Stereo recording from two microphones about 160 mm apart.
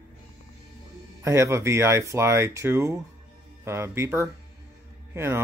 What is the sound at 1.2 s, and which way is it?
Speech, 15° right (ahead or behind).